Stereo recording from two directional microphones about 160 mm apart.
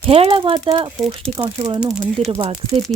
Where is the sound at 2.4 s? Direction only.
35° right (ahead or behind).